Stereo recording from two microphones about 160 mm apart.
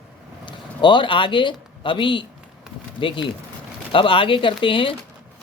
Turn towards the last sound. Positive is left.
turn(degrees=35)  # may be behind; listen again after turning